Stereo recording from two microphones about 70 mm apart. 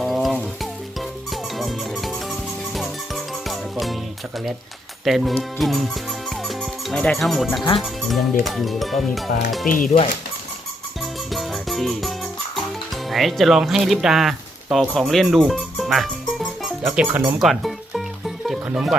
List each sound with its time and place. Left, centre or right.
0.0 s music: centre
5.0 s music: centre
6.9 s speech: centre
7.2 s speech: centre
11.0 s music: centre
16.9 s speech: centre
17.4 s music: centre
18.4 s speech: centre